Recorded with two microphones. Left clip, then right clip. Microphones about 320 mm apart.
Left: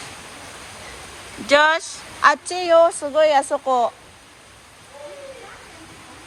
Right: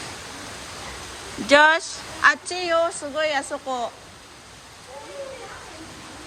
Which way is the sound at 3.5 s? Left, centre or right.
Left.